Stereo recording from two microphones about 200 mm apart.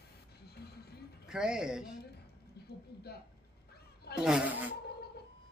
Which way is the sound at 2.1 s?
55° left (ahead or behind).